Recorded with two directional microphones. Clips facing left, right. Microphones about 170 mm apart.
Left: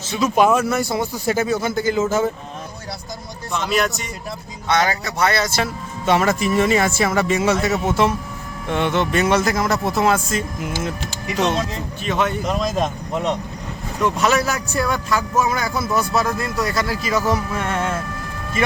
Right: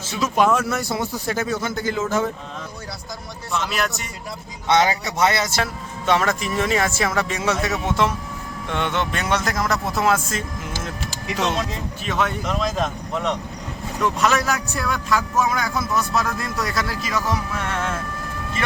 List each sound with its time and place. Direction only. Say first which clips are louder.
0.3 s speech: left 3 dB; 5° left (ahead or behind)
3.5 s speech: left 4 dB; centre (ahead or behind)
4.7 s speech: right 1 dB; 20° right (ahead or behind)
6.1 s speech: left 3 dB; 5° left (ahead or behind)
10.6 s music: left 5 dB; 10° left (ahead or behind)
12.0 s speech: left 3 dB; centre (ahead or behind)
14.0 s speech: left 2 dB; centre (ahead or behind)
17.2 s music: left 4 dB; 5° left (ahead or behind)